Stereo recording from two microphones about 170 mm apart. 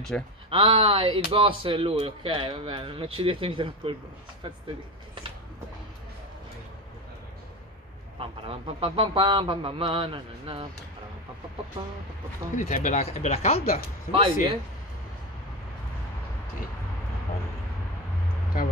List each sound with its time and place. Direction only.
0.1 s speech: 5° left (ahead or behind)
0.5 s speech: 30° right (ahead or behind)
8.2 s speech: 30° right (ahead or behind)
12.5 s speech: 45° left (ahead or behind)
14.1 s speech: 35° right (ahead or behind)